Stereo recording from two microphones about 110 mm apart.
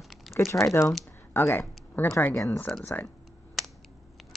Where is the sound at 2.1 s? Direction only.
25° left (ahead or behind).